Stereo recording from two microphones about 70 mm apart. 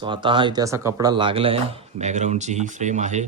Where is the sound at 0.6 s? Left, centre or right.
Right.